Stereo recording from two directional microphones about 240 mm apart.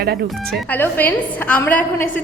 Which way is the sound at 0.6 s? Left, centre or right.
Centre.